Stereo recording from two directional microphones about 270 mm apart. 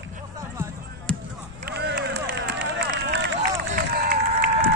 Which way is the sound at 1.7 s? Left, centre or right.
Right.